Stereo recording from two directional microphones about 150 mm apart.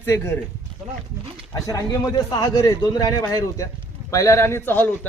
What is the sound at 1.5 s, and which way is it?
A man's voice, 20° left (ahead or behind).